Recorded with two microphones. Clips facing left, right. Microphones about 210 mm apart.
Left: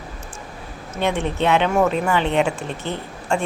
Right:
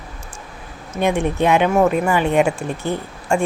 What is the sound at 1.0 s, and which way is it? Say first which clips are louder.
Speech: right 3 dB; 10° right (ahead or behind).